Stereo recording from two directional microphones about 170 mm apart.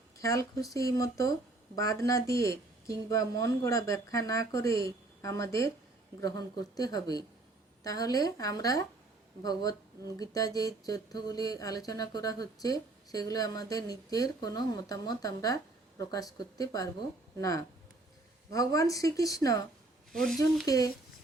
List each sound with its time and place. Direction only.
0.2 s speech: 20° left (ahead or behind)
18.5 s speech: 20° left (ahead or behind)
20.1 s speech: 5° left (ahead or behind)
20.7 s speech: 20° left (ahead or behind)